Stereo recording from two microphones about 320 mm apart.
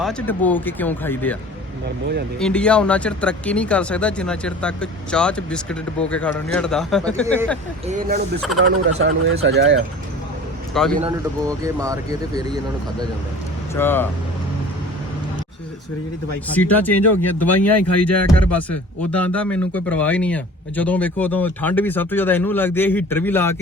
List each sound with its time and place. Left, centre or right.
0.0 s speech: centre
2.4 s speech: centre
7.9 s speech: right
9.0 s speech: right
10.8 s speech: centre
11.4 s speech: centre
13.7 s speech: centre
16.5 s speech: centre